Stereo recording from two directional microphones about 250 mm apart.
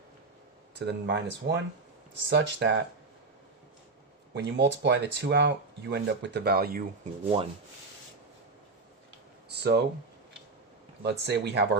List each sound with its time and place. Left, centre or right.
0.8 s speech: right
4.4 s speech: right
9.5 s speech: right
11.0 s speech: right